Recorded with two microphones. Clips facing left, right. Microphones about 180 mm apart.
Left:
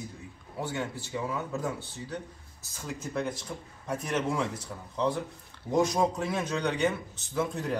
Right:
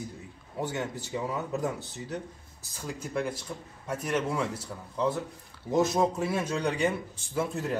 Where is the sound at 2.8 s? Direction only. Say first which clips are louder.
Right 1 dB; 10° right (ahead or behind).